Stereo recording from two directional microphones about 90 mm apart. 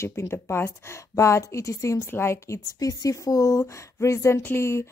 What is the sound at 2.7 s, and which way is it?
Speech, 40° left (ahead or behind).